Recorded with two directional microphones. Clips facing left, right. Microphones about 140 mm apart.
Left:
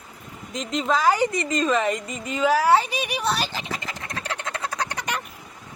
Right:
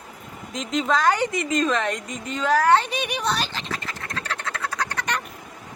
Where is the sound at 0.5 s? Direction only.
Centre (ahead or behind); by 5.1 s 15° left (ahead or behind).